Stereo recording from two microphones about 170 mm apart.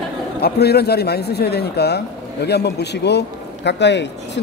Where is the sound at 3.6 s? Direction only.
90° left.